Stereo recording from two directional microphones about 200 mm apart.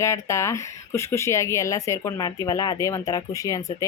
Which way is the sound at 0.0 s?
15° left (ahead or behind).